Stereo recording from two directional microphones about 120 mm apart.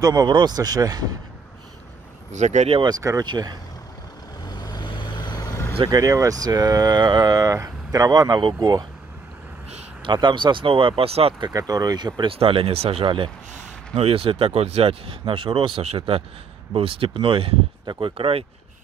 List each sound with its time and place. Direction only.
0.0 s speech: 30° right (ahead or behind)
2.3 s speech: 75° right (ahead or behind)
2.7 s speech: 40° right (ahead or behind)
3.0 s speech: 25° right (ahead or behind)
4.6 s vehicle: 35° left (ahead or behind)
5.9 s speech: 30° right (ahead or behind)
10.0 s speech: 40° right (ahead or behind)
11.3 s speech: 35° right (ahead or behind)
12.2 s speech: 50° right (ahead or behind)